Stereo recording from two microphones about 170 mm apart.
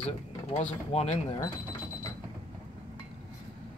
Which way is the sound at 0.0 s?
40° left (ahead or behind).